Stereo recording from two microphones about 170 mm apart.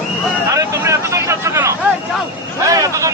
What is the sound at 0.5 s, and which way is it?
Vehicle, 20° right (ahead or behind).